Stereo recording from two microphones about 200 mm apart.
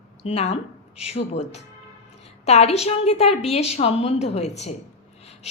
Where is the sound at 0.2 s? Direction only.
30° left (ahead or behind).